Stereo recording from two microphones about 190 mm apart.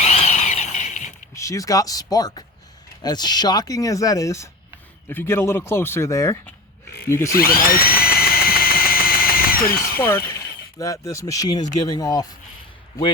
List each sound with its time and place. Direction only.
0.0 s a sound: 35° left (ahead or behind)
1.4 s speech: 15° left (ahead or behind)
7.3 s drill: 50° left (ahead or behind)
10.0 s speech: 10° left (ahead or behind)